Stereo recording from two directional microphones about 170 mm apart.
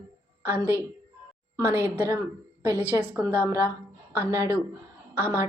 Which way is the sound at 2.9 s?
10° right (ahead or behind).